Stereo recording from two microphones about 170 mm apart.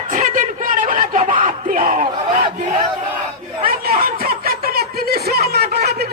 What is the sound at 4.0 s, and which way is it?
Snicker, 60° right (ahead or behind).